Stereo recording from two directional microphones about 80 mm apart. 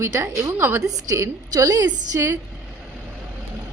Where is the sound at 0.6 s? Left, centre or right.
Right.